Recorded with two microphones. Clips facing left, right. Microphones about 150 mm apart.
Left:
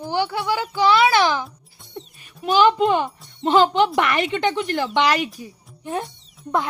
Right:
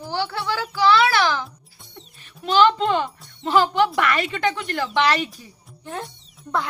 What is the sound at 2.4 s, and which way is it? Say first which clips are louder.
Speech: left 1 dB; 15° left (ahead or behind).